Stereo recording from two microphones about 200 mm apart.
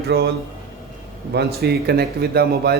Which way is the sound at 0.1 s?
60° right (ahead or behind).